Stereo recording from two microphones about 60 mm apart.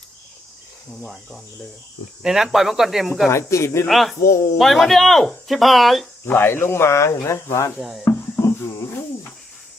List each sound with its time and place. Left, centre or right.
1.0 s speech: centre
3.2 s speech: left
3.8 s speech: centre
4.2 s speech: left
4.5 s speech: centre
6.2 s speech: left
7.8 s speech: centre
8.4 s a sound: left